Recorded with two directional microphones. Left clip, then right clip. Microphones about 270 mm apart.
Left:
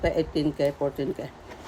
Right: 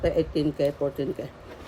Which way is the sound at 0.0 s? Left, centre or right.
Centre.